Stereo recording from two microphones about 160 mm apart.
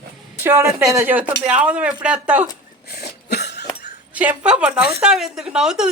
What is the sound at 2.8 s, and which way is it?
Cough, 90° left.